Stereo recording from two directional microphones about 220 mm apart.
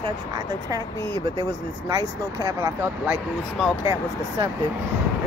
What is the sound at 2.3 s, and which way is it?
Speech, 15° right (ahead or behind).